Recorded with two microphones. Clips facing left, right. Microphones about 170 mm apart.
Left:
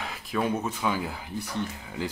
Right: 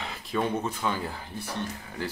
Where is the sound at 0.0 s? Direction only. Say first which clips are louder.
Even; centre (ahead or behind).